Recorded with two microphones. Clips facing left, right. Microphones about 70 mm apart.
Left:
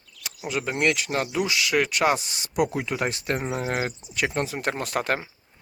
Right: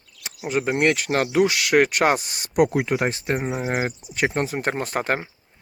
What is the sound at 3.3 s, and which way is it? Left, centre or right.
Speech, centre.